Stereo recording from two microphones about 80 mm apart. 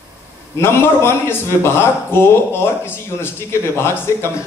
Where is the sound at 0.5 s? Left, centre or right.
Left.